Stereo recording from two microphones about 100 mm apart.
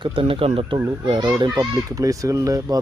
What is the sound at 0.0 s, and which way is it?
Speech, 60° right (ahead or behind).